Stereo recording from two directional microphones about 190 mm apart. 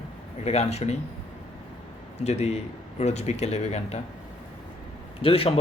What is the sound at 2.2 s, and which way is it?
Speech, 35° left (ahead or behind).